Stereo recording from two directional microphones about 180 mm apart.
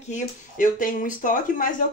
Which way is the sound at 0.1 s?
50° left (ahead or behind).